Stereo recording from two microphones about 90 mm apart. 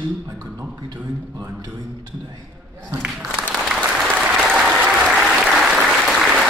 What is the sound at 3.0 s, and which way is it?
Applause, 5° right (ahead or behind).